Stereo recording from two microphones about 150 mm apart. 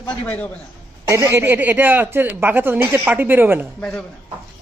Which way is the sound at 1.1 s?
20° right (ahead or behind).